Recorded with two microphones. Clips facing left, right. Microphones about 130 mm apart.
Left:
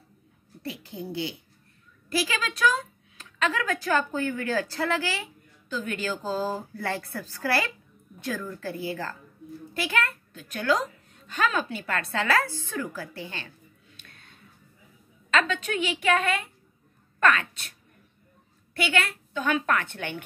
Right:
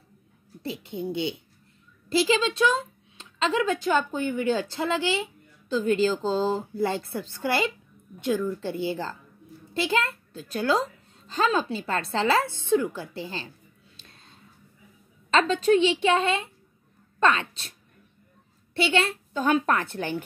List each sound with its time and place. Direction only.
0.6 s speech: 25° right (ahead or behind)
14.0 s a sound: 25° right (ahead or behind)
15.3 s speech: 30° right (ahead or behind)
18.8 s a woman's voice: 25° right (ahead or behind)